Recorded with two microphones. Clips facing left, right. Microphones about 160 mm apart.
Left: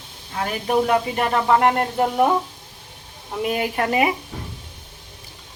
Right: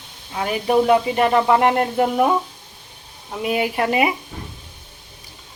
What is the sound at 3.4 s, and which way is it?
Speech, 10° right (ahead or behind).